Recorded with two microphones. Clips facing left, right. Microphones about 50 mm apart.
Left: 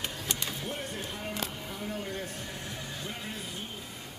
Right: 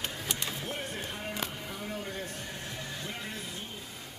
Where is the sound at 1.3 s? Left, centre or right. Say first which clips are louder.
Even; centre.